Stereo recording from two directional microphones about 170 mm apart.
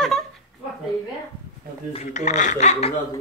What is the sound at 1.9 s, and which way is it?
Speech, 45° left (ahead or behind).